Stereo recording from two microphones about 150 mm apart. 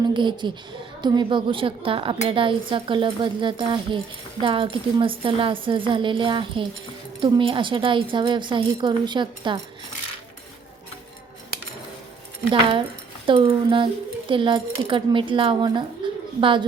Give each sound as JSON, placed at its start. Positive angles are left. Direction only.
{"t": 0.1, "sound": "a woman's voice", "side_deg": -30}
{"t": 13.2, "sound": "speech", "side_deg": -35}
{"t": 16.0, "sound": "a sound", "side_deg": -30}
{"t": 16.4, "sound": "speech", "side_deg": -35}